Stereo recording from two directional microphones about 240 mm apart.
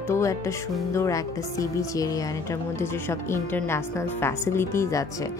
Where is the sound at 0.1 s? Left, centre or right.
Centre.